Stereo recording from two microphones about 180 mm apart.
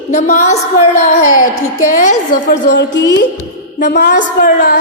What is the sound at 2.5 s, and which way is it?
Speech, 75° left (ahead or behind).